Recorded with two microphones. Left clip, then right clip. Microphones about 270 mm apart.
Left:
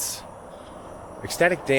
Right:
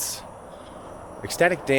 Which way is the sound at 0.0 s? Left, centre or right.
Right.